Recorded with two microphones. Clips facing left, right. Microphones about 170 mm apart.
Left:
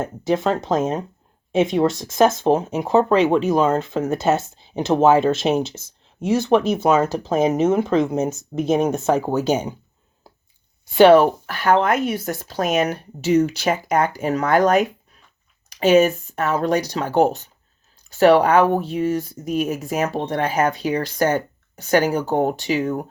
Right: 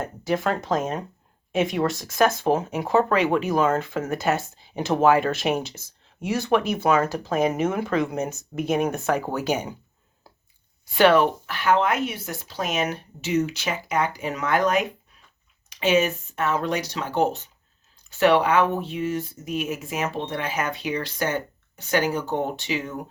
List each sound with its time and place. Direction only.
0.0 s speech: 25° left (ahead or behind)
10.9 s speech: 30° left (ahead or behind); by 23.0 s 45° left (ahead or behind)